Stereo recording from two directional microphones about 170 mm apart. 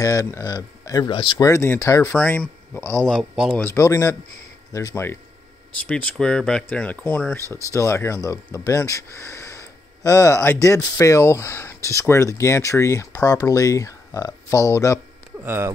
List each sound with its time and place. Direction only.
0.0 s speech: 20° left (ahead or behind)
1.5 s speech: 15° left (ahead or behind)
3.1 s speech: centre (ahead or behind)
3.6 s speech: 15° left (ahead or behind)
15.3 s speech: 15° right (ahead or behind)